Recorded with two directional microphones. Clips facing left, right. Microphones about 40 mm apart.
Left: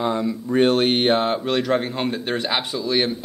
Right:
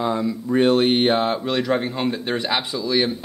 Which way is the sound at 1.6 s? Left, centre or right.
Centre.